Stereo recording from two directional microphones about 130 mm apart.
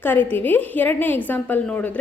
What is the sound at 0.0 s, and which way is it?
A woman's voice, 15° left (ahead or behind).